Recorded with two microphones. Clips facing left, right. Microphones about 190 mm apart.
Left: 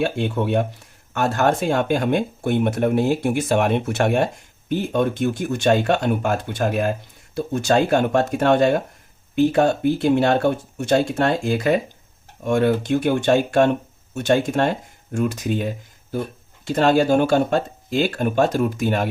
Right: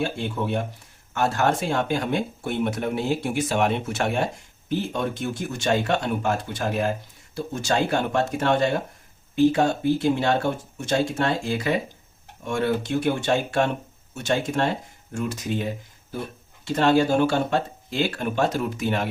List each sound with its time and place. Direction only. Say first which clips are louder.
0.0 s speech: left 5 dB; 60° left (ahead or behind)
16.7 s speech: left 3 dB; 45° left (ahead or behind)